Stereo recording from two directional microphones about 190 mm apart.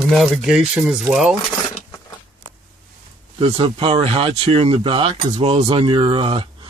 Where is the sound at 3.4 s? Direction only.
30° right (ahead or behind).